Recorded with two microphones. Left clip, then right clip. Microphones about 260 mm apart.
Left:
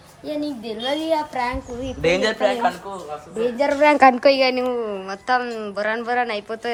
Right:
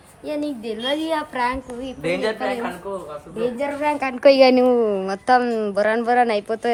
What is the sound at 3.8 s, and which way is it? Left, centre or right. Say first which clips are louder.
Speech: left 12 dB; left.